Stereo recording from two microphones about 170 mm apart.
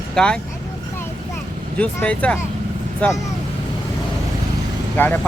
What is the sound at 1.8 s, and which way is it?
Speech, 5° left (ahead or behind).